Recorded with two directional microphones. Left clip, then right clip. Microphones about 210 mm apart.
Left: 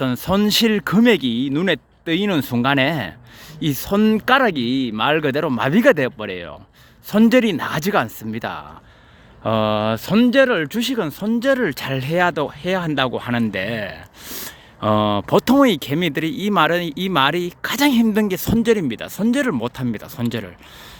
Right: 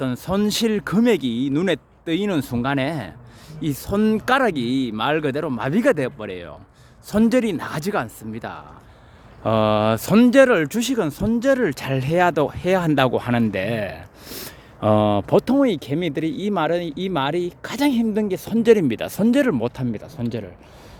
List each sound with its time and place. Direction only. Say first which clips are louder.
0.0 s speech: left 3 dB; 15° left (ahead or behind)
9.4 s speech: right 1 dB; 5° left (ahead or behind)
15.4 s speech: left 6 dB; 15° left (ahead or behind)
18.6 s speech: right 5 dB; 5° right (ahead or behind); by 20.5 s 10° left (ahead or behind)